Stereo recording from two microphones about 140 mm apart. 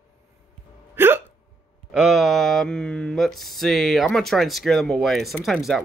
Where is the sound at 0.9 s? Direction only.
15° right (ahead or behind).